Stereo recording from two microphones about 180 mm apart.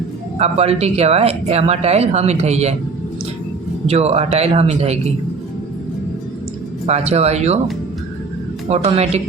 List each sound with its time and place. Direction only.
0.3 s speech: 35° right (ahead or behind)
3.8 s speech: 35° right (ahead or behind)
6.8 s speech: 35° right (ahead or behind)
8.7 s speech: 35° right (ahead or behind)